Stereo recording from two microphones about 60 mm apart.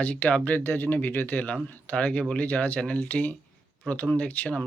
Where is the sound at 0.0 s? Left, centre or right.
Left.